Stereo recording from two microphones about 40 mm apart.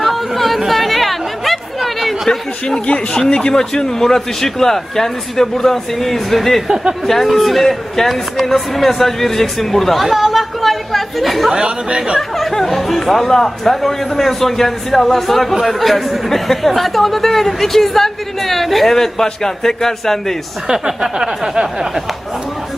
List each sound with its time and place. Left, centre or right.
0.0 s chatter: centre
2.8 s speech: left; by 11.5 s centre
11.5 s speech: centre
12.4 s speech: centre
20.7 s a sound: centre